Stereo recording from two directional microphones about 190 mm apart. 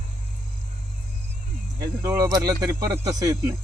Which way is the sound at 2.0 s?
15° right (ahead or behind).